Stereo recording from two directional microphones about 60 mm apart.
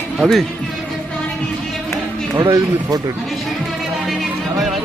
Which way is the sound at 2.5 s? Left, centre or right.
Right.